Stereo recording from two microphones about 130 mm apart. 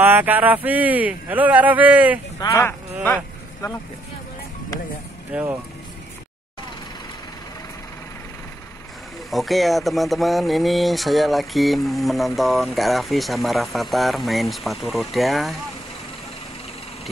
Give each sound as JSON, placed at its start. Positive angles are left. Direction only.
{"t": 0.0, "sound": "speech", "side_deg": -15}
{"t": 2.4, "sound": "speech", "side_deg": 25}
{"t": 5.3, "sound": "speech", "side_deg": -15}
{"t": 9.3, "sound": "speech", "side_deg": 0}